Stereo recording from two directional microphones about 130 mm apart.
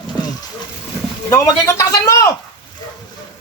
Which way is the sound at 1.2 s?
25° left (ahead or behind).